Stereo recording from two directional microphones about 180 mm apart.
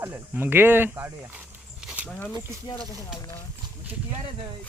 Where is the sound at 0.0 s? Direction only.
10° right (ahead or behind).